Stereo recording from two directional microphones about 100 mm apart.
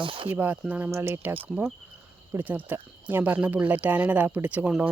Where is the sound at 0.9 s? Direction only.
25° right (ahead or behind).